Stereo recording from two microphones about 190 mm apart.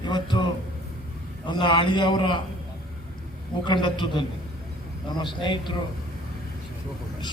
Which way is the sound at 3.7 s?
25° left (ahead or behind).